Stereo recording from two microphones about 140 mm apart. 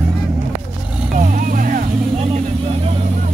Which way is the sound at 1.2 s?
80° right.